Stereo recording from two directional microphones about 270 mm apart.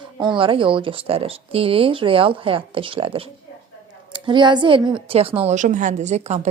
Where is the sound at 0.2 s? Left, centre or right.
Centre.